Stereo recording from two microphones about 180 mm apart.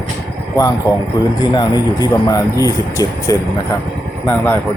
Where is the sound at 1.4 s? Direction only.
25° left (ahead or behind).